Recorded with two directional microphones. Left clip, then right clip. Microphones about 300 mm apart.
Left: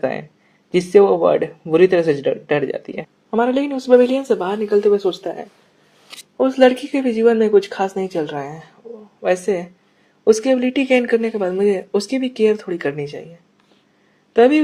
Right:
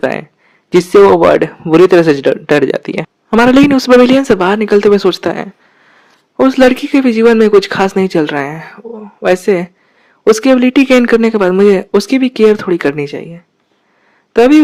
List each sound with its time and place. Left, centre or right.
0.0 s a man's voice: right
14.3 s speech: right